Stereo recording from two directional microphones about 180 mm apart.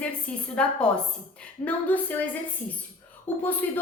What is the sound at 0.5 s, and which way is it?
A woman's voice, 5° left (ahead or behind).